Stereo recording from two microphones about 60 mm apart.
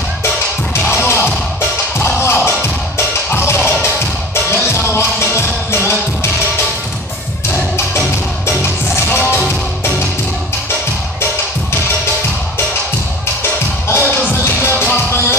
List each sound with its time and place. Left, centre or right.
0.7 s music: left
8.5 s music: left
13.4 s music: left